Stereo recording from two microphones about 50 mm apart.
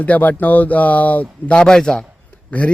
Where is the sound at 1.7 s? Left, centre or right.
Centre.